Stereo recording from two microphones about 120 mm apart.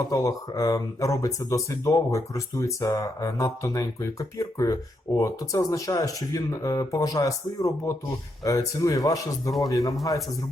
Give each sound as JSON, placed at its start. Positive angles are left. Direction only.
{"t": 0.0, "sound": "speech", "side_deg": 30}